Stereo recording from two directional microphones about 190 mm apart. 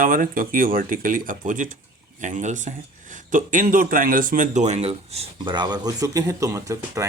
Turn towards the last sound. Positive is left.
turn(degrees=-15)  # may be behind; listen again after turning